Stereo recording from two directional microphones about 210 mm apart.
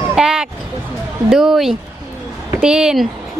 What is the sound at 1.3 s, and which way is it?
A woman's voice, centre (ahead or behind).